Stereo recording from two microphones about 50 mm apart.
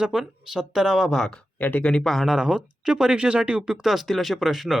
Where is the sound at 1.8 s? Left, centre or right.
Centre.